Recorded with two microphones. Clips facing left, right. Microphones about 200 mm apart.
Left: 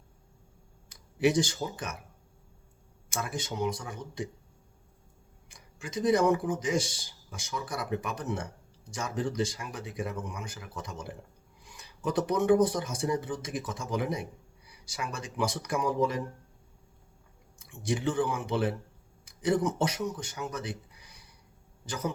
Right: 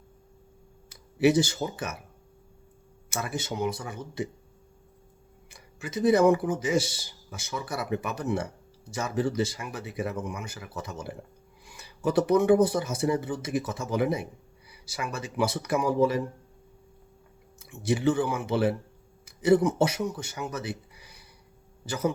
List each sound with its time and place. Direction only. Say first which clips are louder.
0.9 s speech: right 4 dB; 5° right (ahead or behind)
3.1 s speech: right 3 dB; 5° right (ahead or behind)
5.5 s speech: right 4 dB; 5° right (ahead or behind)
17.6 s speech: right 5 dB; 5° right (ahead or behind)